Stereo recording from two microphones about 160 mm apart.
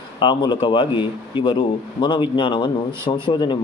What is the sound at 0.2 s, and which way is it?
Speech, 30° left (ahead or behind).